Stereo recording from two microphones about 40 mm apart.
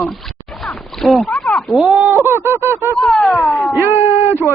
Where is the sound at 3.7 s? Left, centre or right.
Right.